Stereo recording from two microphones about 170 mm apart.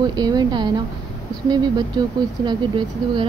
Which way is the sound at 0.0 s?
25° right (ahead or behind).